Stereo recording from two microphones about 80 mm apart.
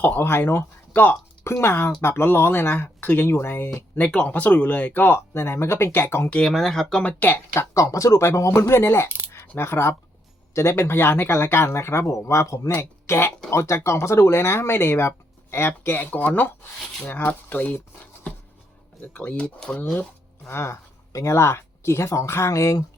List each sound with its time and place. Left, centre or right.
0.0 s speech: left
3.9 s speech: centre
6.5 s speech: centre
7.0 s speech: left
7.7 s speech: left; by 17.7 s centre
18.0 s writing: centre
19.1 s speech: centre
20.5 s speech: left